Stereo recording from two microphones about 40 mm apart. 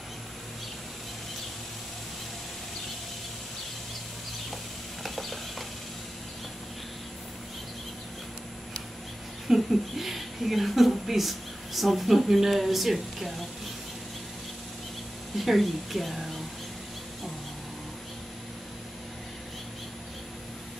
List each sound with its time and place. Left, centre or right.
5.0 s a sound: centre
9.5 s speech: centre
15.3 s speech: centre